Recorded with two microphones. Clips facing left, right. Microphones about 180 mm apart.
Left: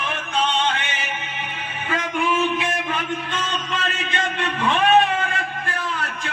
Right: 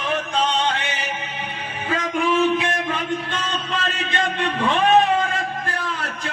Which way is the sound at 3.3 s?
35° right (ahead or behind).